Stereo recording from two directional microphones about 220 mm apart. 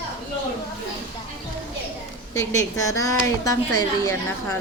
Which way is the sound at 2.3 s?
15° left (ahead or behind).